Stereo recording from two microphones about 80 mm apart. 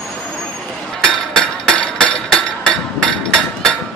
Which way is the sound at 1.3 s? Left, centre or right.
Centre.